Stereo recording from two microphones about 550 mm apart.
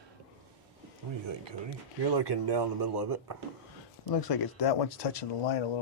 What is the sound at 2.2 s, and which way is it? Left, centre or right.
Speech, right.